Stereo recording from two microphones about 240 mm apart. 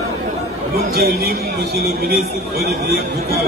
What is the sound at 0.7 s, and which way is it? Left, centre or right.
A man's voice, right.